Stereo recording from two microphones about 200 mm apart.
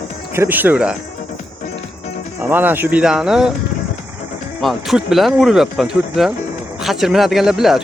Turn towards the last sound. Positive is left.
turn(degrees=0)  # may be behind; listen again after turning